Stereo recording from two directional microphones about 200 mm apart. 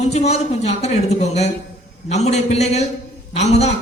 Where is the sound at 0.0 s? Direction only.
30° left (ahead or behind).